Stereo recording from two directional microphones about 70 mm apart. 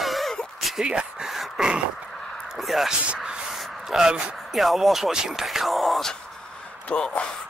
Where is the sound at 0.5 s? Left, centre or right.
Centre.